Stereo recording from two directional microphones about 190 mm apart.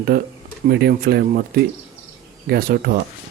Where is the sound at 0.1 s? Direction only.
55° right (ahead or behind).